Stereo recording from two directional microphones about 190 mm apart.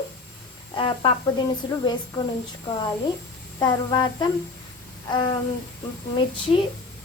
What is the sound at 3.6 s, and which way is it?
Speech, 20° left (ahead or behind).